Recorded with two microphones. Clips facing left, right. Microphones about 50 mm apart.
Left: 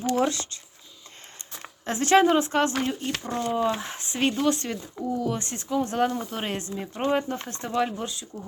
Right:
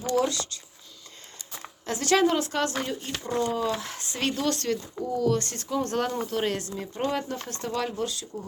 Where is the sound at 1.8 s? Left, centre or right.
Left; by 6.5 s centre.